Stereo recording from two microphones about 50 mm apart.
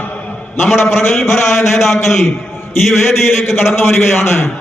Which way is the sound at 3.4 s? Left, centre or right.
Left.